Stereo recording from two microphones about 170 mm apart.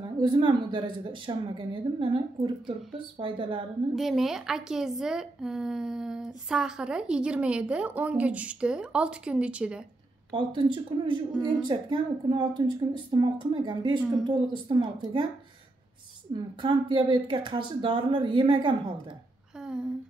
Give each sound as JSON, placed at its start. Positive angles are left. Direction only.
{"t": 0.2, "sound": "a woman's voice", "side_deg": -25}
{"t": 3.9, "sound": "a woman's voice", "side_deg": 0}
{"t": 10.3, "sound": "a woman's voice", "side_deg": -30}
{"t": 16.3, "sound": "a woman's voice", "side_deg": -30}